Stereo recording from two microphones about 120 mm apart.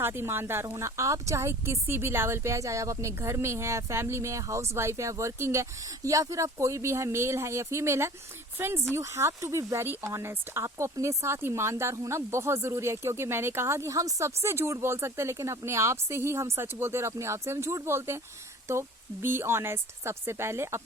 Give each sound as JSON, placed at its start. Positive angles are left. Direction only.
{"t": 0.0, "sound": "speech", "side_deg": -20}